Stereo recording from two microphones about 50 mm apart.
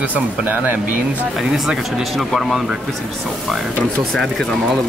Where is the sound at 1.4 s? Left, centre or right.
Centre.